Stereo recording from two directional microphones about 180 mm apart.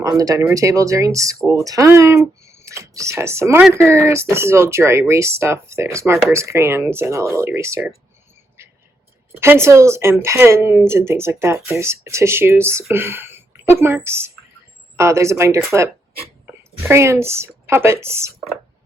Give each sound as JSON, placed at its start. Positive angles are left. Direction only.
{"t": 0.0, "sound": "speech", "side_deg": -20}
{"t": 9.4, "sound": "a woman's voice", "side_deg": -15}